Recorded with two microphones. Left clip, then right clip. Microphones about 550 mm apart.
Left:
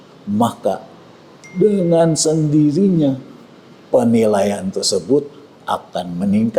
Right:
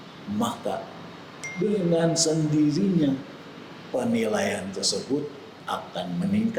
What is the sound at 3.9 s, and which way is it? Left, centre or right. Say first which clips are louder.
A man's voice: left 12 dB; left.